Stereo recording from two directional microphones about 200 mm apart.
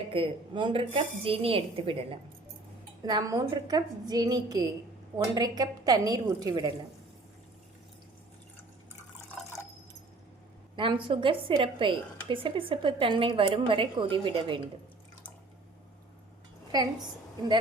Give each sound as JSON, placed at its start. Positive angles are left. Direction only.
{"t": 0.1, "sound": "a woman's voice", "side_deg": -25}
{"t": 10.8, "sound": "a woman's voice", "side_deg": -25}